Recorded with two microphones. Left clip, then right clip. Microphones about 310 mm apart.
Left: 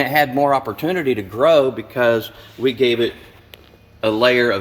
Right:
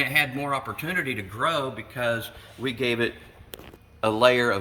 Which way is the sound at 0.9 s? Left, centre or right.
Left.